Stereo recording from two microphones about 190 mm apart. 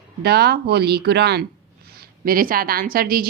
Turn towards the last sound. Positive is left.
turn(degrees=-50)  # may be behind; listen again after turning